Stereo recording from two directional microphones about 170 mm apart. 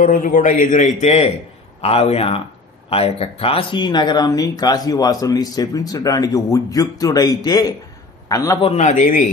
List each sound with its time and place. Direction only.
0.0 s a man's voice: 50° left (ahead or behind); by 8.5 s 20° left (ahead or behind)
8.6 s a man's voice: 40° left (ahead or behind)